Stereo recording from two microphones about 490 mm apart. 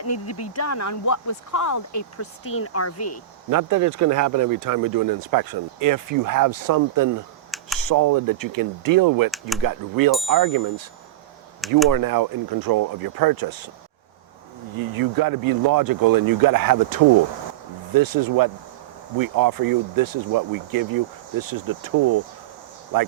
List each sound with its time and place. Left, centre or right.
0.0 s speech: left
3.5 s speech: right
7.5 s computer keyboard: centre
7.9 s speech: right
11.9 s speech: right
14.8 s speech: right
17.9 s speech: right